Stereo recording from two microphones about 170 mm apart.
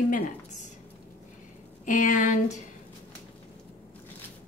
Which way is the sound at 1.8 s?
45° left (ahead or behind).